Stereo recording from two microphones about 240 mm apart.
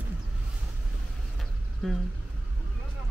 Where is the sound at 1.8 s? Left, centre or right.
Centre.